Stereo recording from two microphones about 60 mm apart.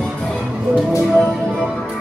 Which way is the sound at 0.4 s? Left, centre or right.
Centre.